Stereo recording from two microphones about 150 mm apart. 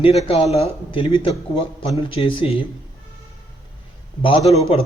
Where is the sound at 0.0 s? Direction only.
40° left (ahead or behind).